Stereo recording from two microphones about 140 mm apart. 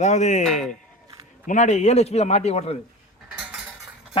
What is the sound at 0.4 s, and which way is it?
Speech, centre (ahead or behind).